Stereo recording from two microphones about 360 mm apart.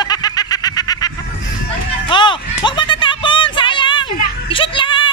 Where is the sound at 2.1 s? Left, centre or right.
Centre.